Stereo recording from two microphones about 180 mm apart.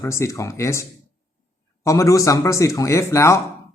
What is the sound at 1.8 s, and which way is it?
Speech, 15° left (ahead or behind).